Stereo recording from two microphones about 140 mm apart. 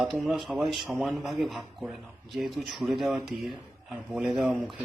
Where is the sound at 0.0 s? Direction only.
Centre (ahead or behind).